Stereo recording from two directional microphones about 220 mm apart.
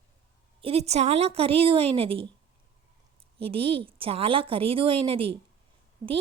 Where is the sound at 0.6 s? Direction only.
30° right (ahead or behind).